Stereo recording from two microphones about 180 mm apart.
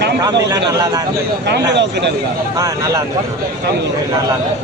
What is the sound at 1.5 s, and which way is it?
Speech, 70° right (ahead or behind).